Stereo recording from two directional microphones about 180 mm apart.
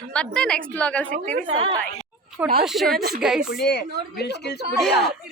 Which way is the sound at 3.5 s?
65° left (ahead or behind).